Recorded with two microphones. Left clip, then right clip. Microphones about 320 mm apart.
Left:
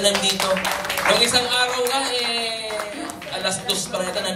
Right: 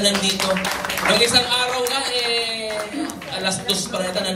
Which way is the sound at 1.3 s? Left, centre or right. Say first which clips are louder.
Right 1 dB; centre.